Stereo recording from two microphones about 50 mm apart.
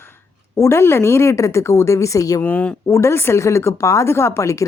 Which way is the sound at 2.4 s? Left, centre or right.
Left.